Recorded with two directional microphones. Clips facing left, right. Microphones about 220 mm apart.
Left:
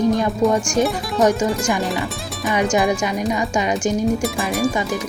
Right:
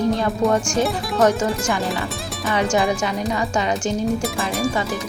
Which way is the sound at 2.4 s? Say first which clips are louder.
Left 2 dB; 15° left (ahead or behind).